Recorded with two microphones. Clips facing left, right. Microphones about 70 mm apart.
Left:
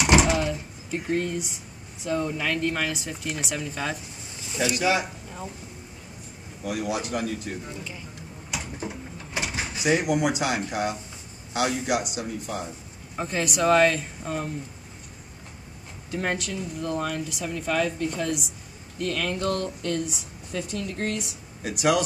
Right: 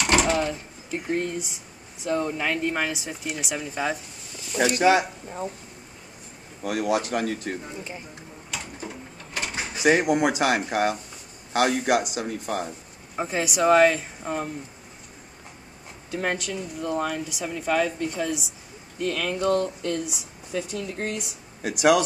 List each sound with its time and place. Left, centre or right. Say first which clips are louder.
0.0 s door: left 1 dB; centre
1.0 s speech: even; centre
4.7 s speech: right 5 dB; right
6.6 s speech: right 4 dB; right
8.5 s a sound: left 2 dB; centre
9.8 s speech: right 3 dB; right
13.1 s speech: right 1 dB; centre
16.1 s speech: right 1 dB; centre